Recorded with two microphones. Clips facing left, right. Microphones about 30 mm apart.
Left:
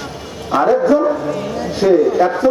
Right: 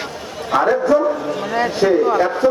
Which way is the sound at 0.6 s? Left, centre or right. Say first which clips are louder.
Left 3 dB; centre.